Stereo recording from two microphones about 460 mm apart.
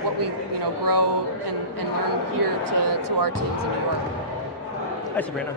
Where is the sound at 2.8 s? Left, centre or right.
Right.